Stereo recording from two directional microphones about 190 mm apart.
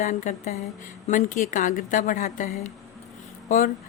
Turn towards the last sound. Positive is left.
turn(degrees=45)  # may be behind; listen again after turning